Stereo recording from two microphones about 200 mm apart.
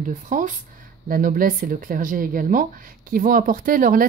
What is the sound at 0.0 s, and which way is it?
A woman's voice, 40° right (ahead or behind).